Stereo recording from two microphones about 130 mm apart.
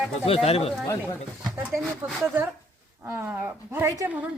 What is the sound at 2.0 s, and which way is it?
A woman's voice, 15° right (ahead or behind).